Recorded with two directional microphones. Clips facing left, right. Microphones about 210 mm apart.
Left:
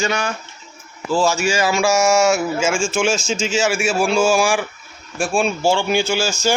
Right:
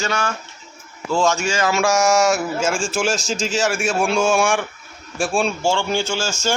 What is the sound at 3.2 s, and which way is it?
Speech, 35° right (ahead or behind).